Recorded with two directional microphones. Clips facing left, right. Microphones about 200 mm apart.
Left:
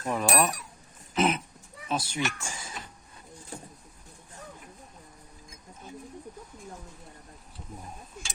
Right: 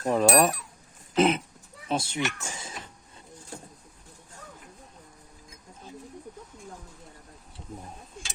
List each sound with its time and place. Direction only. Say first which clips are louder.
0.0 s speech: right 5 dB; 35° right (ahead or behind)